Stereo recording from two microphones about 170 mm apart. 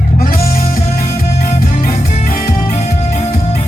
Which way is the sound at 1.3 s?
40° left (ahead or behind).